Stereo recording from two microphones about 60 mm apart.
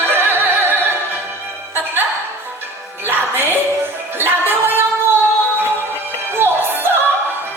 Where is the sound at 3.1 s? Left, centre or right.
Right.